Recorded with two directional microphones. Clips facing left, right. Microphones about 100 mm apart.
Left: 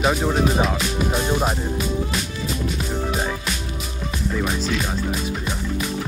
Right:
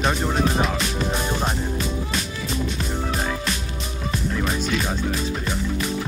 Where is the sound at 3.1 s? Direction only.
10° left (ahead or behind).